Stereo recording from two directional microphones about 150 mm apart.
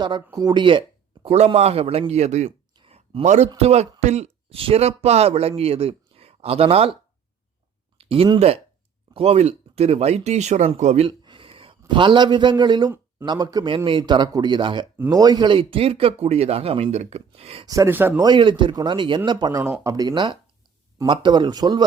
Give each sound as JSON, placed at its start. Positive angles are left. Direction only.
{"t": 0.3, "sound": "speech", "side_deg": -30}
{"t": 2.7, "sound": "a sound", "side_deg": -40}
{"t": 3.6, "sound": "speech", "side_deg": -45}
{"t": 7.9, "sound": "speech", "side_deg": -40}
{"t": 11.0, "sound": "a sound", "side_deg": -35}
{"t": 11.9, "sound": "speech", "side_deg": -30}
{"t": 17.7, "sound": "speech", "side_deg": -20}
{"t": 18.2, "sound": "speech", "side_deg": -30}